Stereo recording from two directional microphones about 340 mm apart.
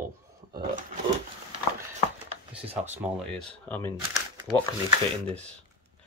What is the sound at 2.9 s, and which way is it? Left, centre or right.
Speech, centre.